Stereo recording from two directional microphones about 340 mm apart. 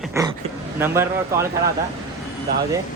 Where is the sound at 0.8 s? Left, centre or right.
Centre.